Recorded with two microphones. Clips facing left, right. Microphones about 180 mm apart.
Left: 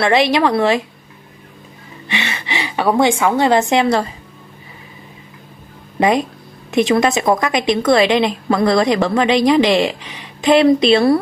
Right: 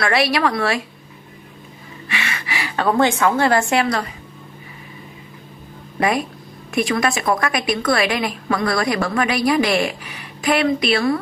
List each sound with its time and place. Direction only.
0.0 s a woman's voice: 20° left (ahead or behind)
2.0 s a woman's voice: 25° left (ahead or behind)
5.9 s a woman's voice: 20° left (ahead or behind)